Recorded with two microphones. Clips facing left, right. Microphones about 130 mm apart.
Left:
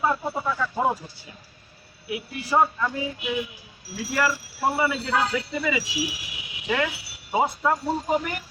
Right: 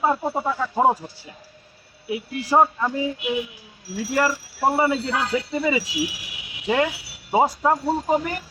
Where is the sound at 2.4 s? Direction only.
35° right (ahead or behind).